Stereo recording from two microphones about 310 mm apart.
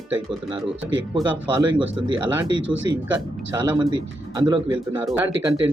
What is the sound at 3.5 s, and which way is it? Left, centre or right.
Speech, centre.